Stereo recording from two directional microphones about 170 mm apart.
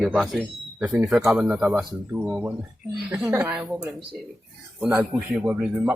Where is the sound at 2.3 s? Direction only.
15° right (ahead or behind).